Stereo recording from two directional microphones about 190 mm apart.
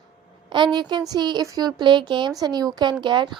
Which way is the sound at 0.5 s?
25° right (ahead or behind).